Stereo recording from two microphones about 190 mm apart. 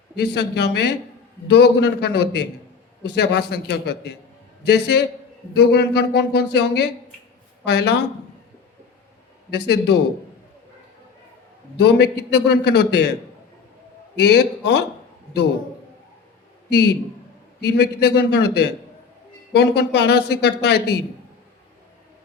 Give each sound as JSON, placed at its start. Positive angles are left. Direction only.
{"t": 0.2, "sound": "speech", "side_deg": 60}
{"t": 9.5, "sound": "speech", "side_deg": 60}
{"t": 11.8, "sound": "speech", "side_deg": 60}
{"t": 14.2, "sound": "speech", "side_deg": 60}
{"t": 16.6, "sound": "a man's voice", "side_deg": 60}